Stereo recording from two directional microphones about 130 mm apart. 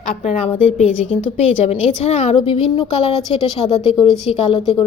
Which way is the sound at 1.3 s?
55° left (ahead or behind).